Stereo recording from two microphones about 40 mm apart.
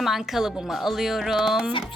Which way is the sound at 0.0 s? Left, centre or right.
Centre.